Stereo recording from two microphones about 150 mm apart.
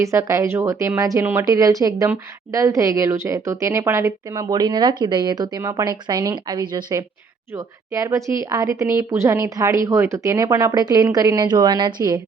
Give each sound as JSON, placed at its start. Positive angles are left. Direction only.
{"t": 0.0, "sound": "a woman's voice", "side_deg": -20}